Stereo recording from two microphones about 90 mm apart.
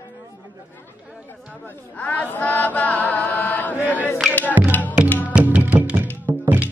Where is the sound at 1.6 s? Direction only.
20° left (ahead or behind).